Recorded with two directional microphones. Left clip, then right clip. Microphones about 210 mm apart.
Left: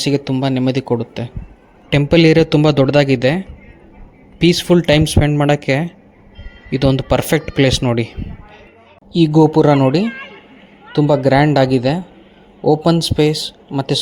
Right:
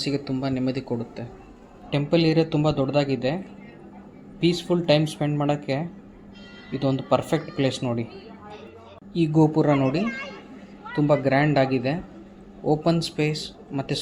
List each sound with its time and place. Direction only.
0.0 s speech: 45° left (ahead or behind)
9.1 s speech: 40° left (ahead or behind)